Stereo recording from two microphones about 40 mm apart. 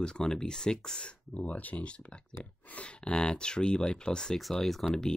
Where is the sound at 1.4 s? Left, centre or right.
Left.